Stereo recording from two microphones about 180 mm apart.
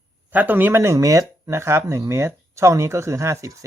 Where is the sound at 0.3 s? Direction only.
10° right (ahead or behind).